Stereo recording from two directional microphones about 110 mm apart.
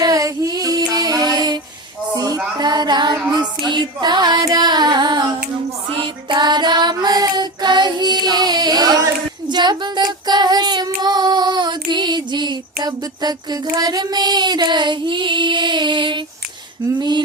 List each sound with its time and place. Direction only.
0.0 s female singing: 30° right (ahead or behind)
2.1 s a sound: 35° right (ahead or behind)
2.6 s music: 40° right (ahead or behind)
3.7 s carnatic music: 45° right (ahead or behind)
6.0 s child singing: 45° right (ahead or behind)
17.0 s carnatic music: 40° right (ahead or behind)